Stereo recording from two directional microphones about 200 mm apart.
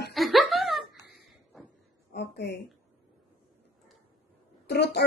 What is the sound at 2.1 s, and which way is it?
Speech, 60° left (ahead or behind).